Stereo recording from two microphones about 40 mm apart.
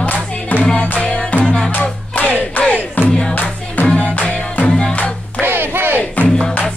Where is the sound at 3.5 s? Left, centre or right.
Left.